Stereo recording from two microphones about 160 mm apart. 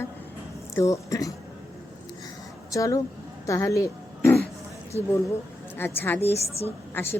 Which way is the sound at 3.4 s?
20° left (ahead or behind).